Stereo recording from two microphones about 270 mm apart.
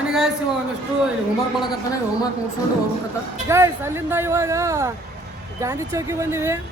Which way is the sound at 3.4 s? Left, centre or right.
Centre.